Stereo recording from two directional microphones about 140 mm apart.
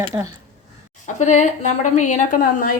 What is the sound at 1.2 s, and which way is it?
A woman's voice, 60° left (ahead or behind).